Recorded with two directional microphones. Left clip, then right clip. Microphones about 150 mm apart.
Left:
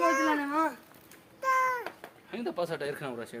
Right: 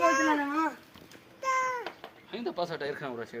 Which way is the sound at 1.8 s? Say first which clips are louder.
Right 1 dB; 40° left (ahead or behind).